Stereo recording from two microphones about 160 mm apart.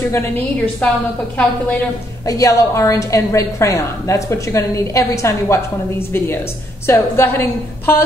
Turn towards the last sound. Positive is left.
turn(degrees=15)  # may be behind; listen again after turning